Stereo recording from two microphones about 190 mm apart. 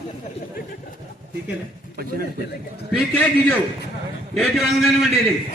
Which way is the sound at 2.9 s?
10° left (ahead or behind).